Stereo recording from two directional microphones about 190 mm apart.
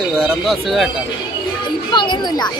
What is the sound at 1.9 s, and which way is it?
Speech, 25° left (ahead or behind).